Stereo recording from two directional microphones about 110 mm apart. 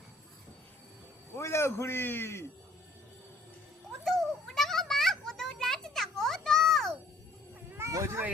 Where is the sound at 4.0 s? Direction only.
Centre (ahead or behind).